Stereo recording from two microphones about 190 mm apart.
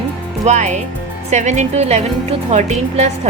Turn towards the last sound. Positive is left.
turn(degrees=-40)  # may be behind; listen again after turning